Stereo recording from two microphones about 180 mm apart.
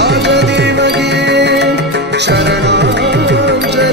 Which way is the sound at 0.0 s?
70° right (ahead or behind).